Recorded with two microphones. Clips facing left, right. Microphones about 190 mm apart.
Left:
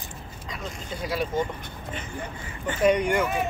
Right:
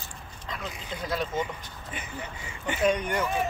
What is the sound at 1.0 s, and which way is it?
Speech, 10° left (ahead or behind).